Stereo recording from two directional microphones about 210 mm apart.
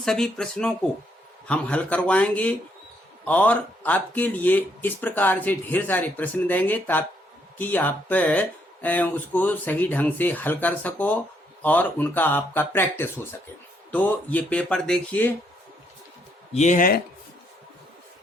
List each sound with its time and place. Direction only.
0.0 s speech: centre (ahead or behind)
16.6 s speech: 35° left (ahead or behind)